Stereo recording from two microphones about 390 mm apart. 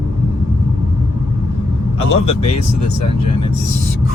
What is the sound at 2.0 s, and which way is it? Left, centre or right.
Speech, centre.